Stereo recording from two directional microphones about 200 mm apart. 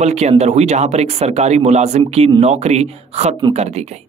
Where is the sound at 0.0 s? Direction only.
35° right (ahead or behind).